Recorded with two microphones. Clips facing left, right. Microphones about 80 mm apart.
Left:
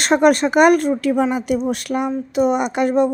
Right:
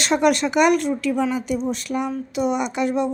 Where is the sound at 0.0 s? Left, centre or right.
Left.